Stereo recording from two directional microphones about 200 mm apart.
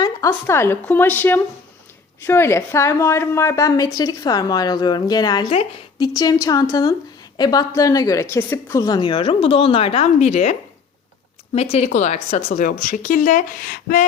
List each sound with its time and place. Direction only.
0.0 s a woman's voice: 15° left (ahead or behind); by 10.5 s 35° left (ahead or behind)
11.5 s speech: 30° left (ahead or behind)